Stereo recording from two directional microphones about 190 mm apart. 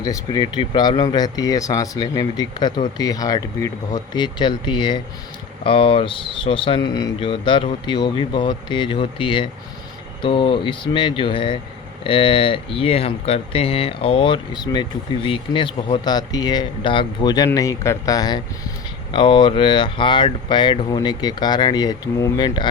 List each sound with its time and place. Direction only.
0.0 s speech: 20° left (ahead or behind)